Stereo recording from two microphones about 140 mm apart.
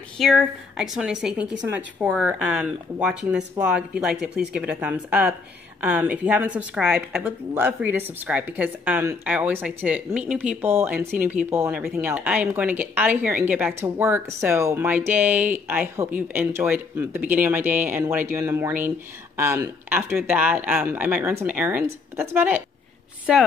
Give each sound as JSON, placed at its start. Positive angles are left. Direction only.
{"t": 0.2, "sound": "a woman's voice", "side_deg": 0}
{"t": 23.3, "sound": "a woman's voice", "side_deg": -5}